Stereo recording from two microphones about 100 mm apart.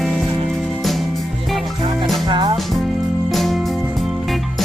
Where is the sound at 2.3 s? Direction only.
55° right (ahead or behind).